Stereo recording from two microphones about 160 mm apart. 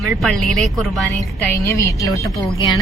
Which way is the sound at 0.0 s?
Centre (ahead or behind).